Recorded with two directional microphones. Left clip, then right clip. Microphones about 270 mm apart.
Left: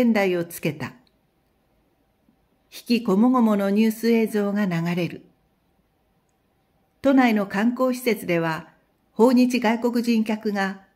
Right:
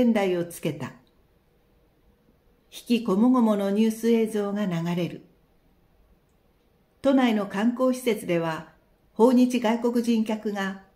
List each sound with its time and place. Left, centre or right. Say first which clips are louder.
0.0 s a woman's voice: left 2 dB; left
2.7 s a woman's voice: left 3 dB; left
7.0 s a woman's voice: left 3 dB; left